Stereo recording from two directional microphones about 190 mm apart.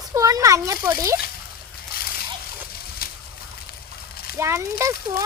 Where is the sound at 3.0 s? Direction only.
50° left (ahead or behind).